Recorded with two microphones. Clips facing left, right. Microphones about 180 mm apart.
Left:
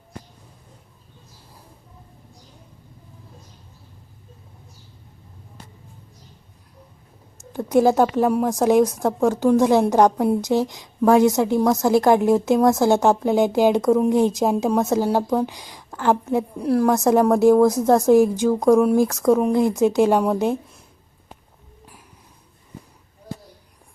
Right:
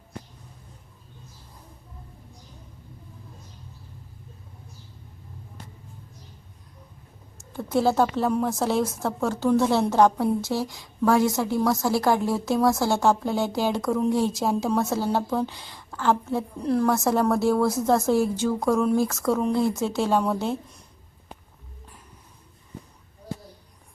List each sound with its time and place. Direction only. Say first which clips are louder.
7.5 s a woman's voice: left 5 dB; 15° left (ahead or behind)